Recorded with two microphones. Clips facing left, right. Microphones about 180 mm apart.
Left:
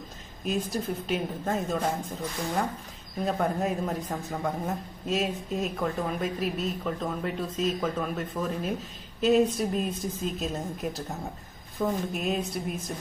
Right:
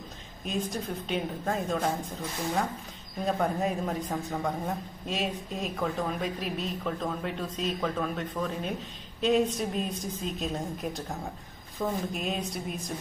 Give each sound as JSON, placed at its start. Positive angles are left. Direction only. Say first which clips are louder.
{"t": 0.5, "sound": "a man's voice", "louder": "left 3 dB", "side_deg": 5}
{"t": 3.3, "sound": "a man's voice", "louder": "even", "side_deg": 0}